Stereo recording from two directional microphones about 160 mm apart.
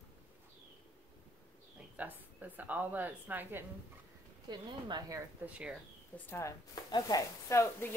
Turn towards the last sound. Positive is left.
turn(degrees=20)  # may be behind; listen again after turning